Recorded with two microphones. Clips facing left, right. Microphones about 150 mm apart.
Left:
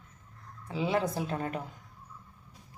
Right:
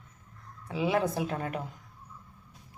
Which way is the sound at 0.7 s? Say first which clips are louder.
Right 2 dB; 15° right (ahead or behind).